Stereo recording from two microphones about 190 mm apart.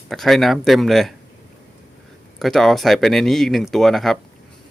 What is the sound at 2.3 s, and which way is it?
Speech, centre (ahead or behind).